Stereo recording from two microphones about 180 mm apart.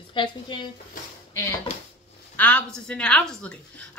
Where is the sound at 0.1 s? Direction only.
25° left (ahead or behind).